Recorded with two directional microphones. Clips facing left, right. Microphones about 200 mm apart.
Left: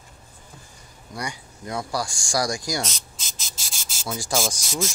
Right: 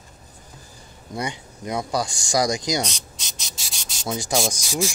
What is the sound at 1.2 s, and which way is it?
Speech, 20° right (ahead or behind).